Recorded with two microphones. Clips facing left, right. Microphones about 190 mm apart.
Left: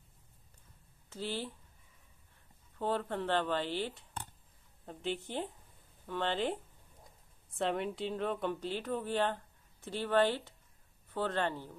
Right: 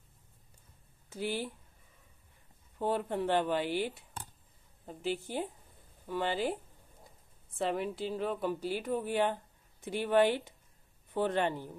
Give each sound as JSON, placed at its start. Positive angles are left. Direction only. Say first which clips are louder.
{"t": 1.1, "sound": "a woman's voice", "louder": "right 3 dB", "side_deg": -15}
{"t": 2.8, "sound": "a woman's voice", "louder": "right 2 dB", "side_deg": -15}